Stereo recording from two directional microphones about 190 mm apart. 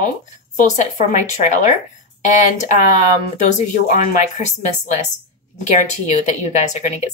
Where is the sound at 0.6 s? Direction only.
40° left (ahead or behind).